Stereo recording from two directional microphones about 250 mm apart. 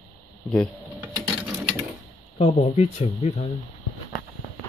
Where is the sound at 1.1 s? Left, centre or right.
Centre.